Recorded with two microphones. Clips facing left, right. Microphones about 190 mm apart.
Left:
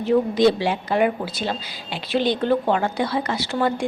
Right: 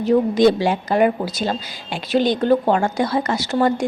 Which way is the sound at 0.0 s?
45° right (ahead or behind).